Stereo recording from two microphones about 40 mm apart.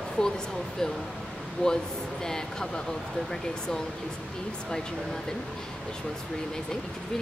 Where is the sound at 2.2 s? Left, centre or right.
Centre.